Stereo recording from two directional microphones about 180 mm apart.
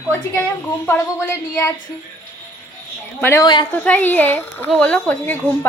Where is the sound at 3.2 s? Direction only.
10° left (ahead or behind).